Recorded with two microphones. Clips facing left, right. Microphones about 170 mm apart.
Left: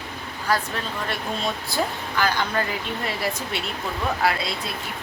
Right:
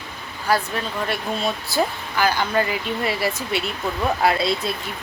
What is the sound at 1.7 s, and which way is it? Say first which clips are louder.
Speech: right 3 dB; 10° right (ahead or behind).